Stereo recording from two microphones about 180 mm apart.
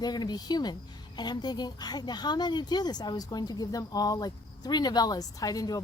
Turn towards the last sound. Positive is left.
turn(degrees=20)  # may be behind; listen again after turning